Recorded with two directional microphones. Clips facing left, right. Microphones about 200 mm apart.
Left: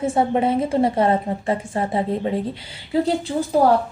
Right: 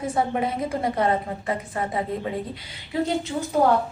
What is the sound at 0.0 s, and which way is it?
A woman's voice, 25° left (ahead or behind).